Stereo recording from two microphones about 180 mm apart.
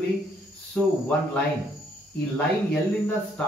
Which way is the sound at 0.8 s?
5° left (ahead or behind).